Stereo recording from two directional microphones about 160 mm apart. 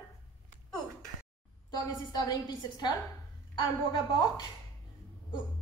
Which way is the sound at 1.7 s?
25° left (ahead or behind).